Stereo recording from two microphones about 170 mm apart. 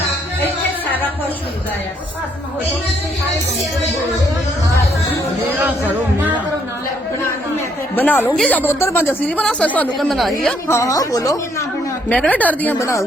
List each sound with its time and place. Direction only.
7.9 s speech: 10° left (ahead or behind)
10.7 s speech: 20° left (ahead or behind)
12.0 s speech: 10° left (ahead or behind)